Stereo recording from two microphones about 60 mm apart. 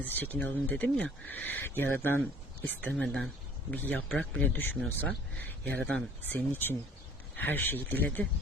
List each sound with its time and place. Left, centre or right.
0.0 s speech: left
3.0 s speech: centre
3.7 s speech: left
4.2 s speech: centre
4.4 s speech: left